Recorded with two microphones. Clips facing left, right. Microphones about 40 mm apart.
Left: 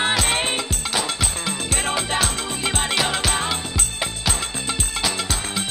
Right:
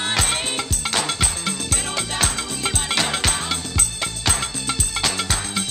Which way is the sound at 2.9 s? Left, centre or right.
Centre.